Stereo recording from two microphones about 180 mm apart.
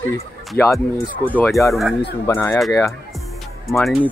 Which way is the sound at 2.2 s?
15° left (ahead or behind).